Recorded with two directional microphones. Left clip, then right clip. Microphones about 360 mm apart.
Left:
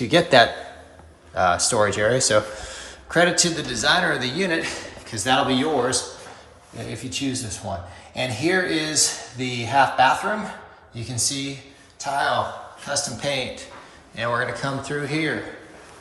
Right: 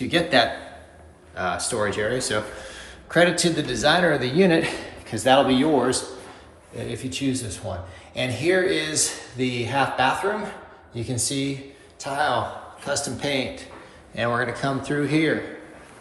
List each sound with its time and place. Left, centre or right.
0.0 s a man's voice: centre